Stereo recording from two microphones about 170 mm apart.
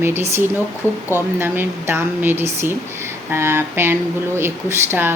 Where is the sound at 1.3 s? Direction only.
10° right (ahead or behind).